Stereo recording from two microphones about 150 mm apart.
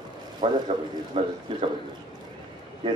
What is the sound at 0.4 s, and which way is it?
Speech, 40° right (ahead or behind).